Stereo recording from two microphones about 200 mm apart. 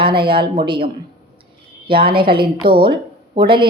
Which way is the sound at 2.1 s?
25° right (ahead or behind).